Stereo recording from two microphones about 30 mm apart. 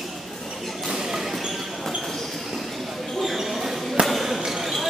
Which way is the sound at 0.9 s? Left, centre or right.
Centre.